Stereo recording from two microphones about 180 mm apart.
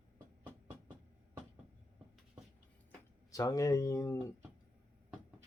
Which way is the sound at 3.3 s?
20° left (ahead or behind).